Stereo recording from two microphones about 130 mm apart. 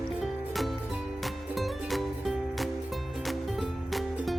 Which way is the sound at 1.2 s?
Centre (ahead or behind).